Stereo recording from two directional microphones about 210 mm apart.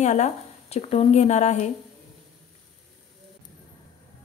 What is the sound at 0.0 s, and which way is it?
A woman's voice, 35° left (ahead or behind).